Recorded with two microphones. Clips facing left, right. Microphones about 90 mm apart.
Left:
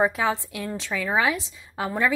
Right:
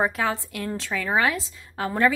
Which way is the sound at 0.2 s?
20° left (ahead or behind).